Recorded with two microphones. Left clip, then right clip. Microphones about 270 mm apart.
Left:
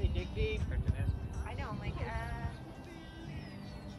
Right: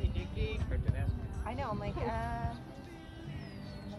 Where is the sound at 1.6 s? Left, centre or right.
Centre.